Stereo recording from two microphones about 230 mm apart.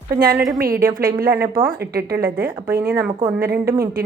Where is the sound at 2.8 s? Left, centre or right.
Centre.